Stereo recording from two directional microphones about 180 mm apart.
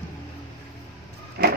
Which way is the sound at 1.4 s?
60° right (ahead or behind).